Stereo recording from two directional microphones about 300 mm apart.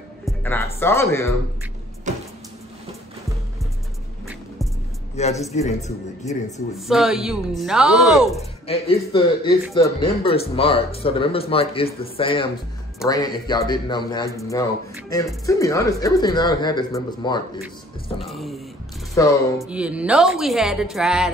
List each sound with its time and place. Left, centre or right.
0.2 s music: centre
0.7 s speech: centre
5.1 s speech: left
6.9 s a woman's voice: centre
8.6 s speech: centre
18.2 s a woman's voice: centre
19.2 s speech: centre
19.7 s a woman's voice: centre